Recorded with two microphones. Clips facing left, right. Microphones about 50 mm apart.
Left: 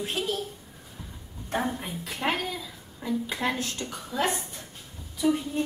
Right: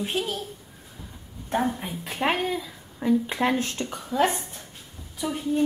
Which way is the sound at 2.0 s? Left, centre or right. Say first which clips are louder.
Right 4 dB; right.